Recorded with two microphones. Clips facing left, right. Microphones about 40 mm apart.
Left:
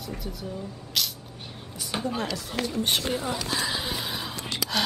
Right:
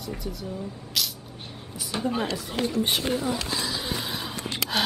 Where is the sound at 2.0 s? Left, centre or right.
Centre.